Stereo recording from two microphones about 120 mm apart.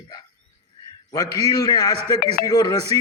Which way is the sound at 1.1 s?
30° left (ahead or behind).